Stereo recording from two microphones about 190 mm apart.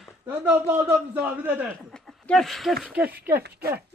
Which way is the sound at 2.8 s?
5° right (ahead or behind).